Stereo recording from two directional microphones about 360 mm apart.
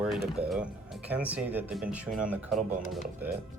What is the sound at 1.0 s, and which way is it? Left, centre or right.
Speech, centre.